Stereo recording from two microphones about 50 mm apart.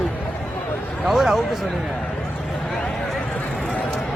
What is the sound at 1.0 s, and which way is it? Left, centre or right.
Speech, centre.